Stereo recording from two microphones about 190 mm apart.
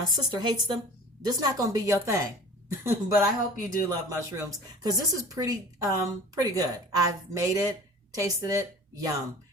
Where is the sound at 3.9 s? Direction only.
15° right (ahead or behind).